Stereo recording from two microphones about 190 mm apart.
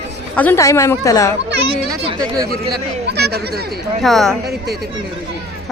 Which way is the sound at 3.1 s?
55° right (ahead or behind).